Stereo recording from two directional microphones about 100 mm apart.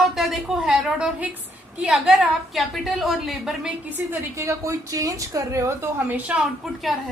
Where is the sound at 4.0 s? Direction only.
20° right (ahead or behind).